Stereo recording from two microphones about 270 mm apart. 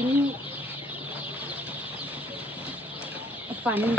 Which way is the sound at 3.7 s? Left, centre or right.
Centre.